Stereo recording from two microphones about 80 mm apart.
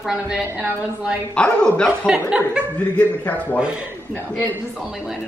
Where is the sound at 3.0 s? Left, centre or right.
Centre.